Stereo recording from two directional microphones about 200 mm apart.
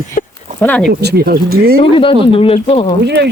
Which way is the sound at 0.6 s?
5° left (ahead or behind).